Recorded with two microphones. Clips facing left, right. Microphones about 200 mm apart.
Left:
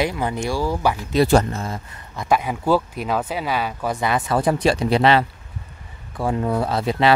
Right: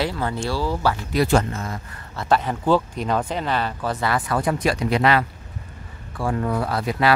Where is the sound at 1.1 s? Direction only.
30° left (ahead or behind).